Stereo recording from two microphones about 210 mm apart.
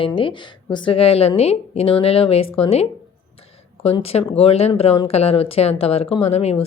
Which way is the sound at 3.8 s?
30° left (ahead or behind).